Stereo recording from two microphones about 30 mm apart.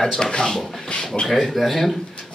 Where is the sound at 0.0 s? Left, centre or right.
Centre.